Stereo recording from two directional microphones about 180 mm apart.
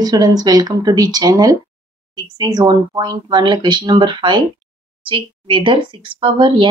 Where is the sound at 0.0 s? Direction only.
20° right (ahead or behind).